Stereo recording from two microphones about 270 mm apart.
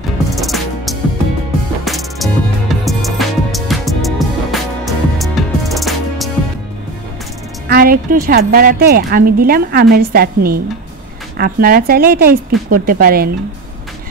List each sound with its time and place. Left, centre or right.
0.4 s music: centre
7.6 s speech: right